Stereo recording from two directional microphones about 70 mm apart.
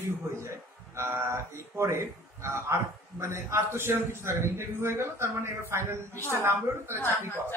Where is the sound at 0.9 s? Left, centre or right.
Right.